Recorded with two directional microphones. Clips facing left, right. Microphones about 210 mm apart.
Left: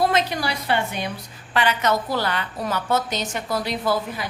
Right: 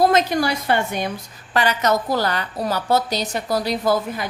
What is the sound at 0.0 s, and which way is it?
A woman's voice, 45° right (ahead or behind).